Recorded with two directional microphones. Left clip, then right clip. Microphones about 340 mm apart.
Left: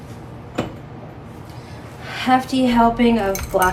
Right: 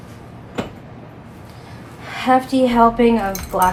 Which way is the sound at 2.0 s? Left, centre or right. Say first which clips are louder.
Right 2 dB; centre.